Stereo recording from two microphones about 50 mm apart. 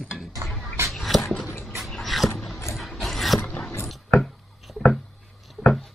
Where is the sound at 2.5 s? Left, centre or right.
Left.